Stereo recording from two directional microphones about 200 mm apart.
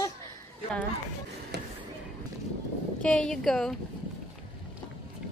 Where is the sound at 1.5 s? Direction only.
55° right (ahead or behind).